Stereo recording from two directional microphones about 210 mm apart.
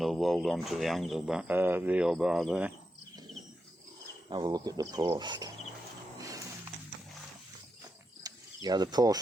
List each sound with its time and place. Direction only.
0.0 s speech: centre (ahead or behind)
4.3 s speech: 20° right (ahead or behind)
6.1 s a sound: 15° right (ahead or behind)
8.2 s mechanisms: 20° right (ahead or behind)